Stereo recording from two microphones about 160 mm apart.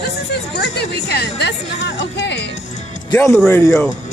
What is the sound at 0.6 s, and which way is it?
Speech, 90° left.